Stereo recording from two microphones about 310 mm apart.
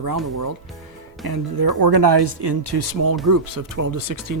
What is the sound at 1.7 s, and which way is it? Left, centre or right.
Speech, right.